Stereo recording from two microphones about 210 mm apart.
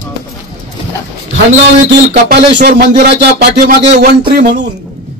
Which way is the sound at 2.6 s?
50° right (ahead or behind).